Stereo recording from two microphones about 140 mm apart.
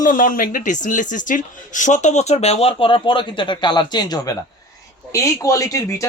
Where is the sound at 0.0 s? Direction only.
70° left (ahead or behind); by 4.2 s 30° left (ahead or behind).